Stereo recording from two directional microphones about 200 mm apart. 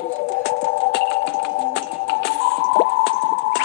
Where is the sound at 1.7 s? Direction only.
60° left (ahead or behind).